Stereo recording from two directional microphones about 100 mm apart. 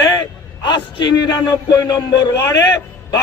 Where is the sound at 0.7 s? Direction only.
45° left (ahead or behind).